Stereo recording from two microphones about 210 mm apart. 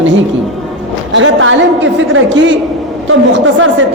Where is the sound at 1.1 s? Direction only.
70° right (ahead or behind).